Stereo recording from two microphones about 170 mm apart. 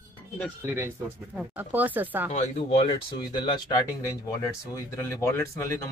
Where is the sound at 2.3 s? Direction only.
45° left (ahead or behind); by 3.6 s 25° left (ahead or behind).